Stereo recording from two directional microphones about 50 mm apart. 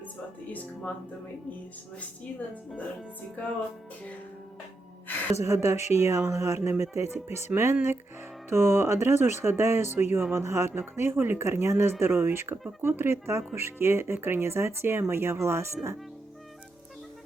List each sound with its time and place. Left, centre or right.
5.4 s speech: right
6.3 s speech: right
10.3 s speech: right
10.7 s speech: right